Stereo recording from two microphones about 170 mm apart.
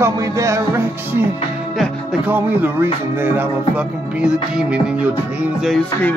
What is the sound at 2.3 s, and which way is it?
Music, 10° right (ahead or behind).